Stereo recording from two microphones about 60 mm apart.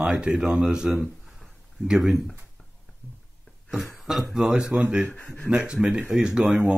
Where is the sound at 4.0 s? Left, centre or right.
Centre.